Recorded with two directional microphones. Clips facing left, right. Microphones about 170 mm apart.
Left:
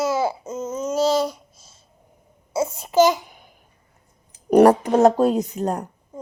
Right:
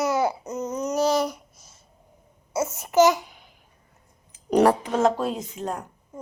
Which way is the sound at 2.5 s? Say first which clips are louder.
Left 2 dB; 10° left (ahead or behind).